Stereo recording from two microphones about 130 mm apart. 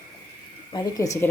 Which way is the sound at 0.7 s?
25° left (ahead or behind).